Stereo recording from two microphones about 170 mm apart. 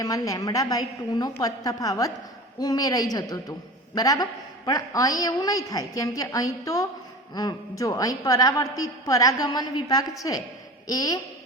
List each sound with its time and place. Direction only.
0.0 s a woman's voice: 20° left (ahead or behind)